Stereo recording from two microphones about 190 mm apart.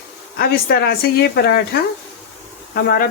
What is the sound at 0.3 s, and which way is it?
Speech, 55° left (ahead or behind).